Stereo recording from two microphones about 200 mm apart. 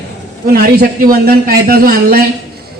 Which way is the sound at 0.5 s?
45° right (ahead or behind).